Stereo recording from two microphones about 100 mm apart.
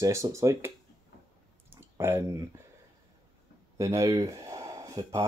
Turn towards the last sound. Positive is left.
turn(degrees=-35)  # may be behind; listen again after turning